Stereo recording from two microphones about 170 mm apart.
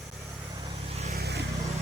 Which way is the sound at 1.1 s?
70° right (ahead or behind).